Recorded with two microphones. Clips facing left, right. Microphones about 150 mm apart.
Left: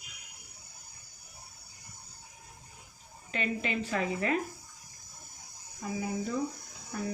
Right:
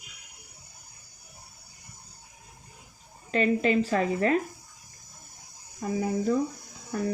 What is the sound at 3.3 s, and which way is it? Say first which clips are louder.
A woman's voice: right 10 dB; 40° right (ahead or behind).